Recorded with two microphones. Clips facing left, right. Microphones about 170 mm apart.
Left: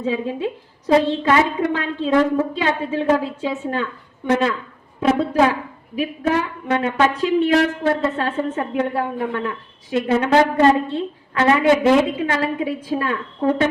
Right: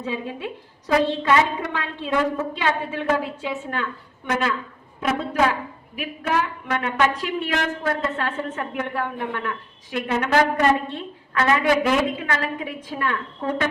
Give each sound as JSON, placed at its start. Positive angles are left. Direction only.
{"t": 0.0, "sound": "a woman's voice", "side_deg": 20}
{"t": 4.9, "sound": "a woman's voice", "side_deg": 25}